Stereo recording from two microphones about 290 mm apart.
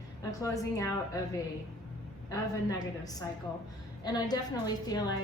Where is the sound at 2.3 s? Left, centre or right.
Centre.